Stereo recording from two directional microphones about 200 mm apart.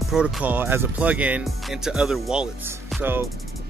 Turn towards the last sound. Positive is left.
turn(degrees=-10)  # may be behind; listen again after turning